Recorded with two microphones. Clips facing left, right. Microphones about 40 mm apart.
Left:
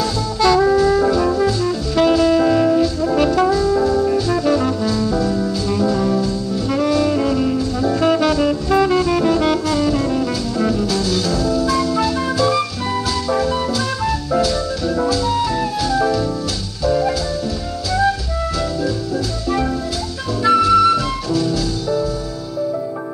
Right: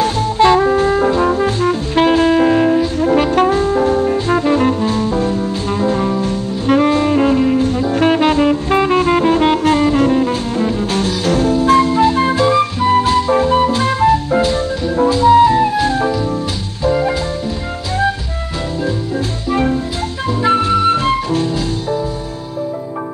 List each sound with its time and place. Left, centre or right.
0.0 s music: right
20.4 s music: right